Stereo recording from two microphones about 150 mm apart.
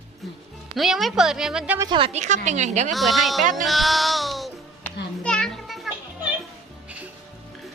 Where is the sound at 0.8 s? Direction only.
Centre (ahead or behind).